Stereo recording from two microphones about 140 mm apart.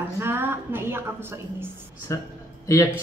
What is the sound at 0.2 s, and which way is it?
A woman's voice, 15° right (ahead or behind).